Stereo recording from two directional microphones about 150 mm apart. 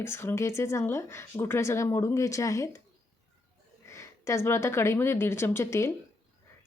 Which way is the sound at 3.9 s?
20° left (ahead or behind).